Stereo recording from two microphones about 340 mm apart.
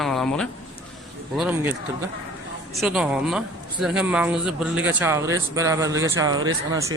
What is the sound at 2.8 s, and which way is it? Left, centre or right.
A man's voice, centre.